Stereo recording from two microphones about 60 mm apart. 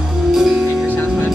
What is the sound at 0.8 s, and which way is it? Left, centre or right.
Music, centre.